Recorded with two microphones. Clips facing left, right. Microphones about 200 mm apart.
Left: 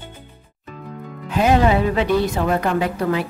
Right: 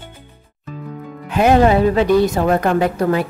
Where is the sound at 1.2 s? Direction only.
55° right (ahead or behind).